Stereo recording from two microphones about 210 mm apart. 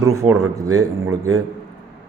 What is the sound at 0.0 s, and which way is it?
Speech, 15° right (ahead or behind).